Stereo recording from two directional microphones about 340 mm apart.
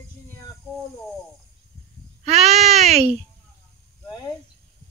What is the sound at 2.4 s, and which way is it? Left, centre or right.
Baby cry, centre.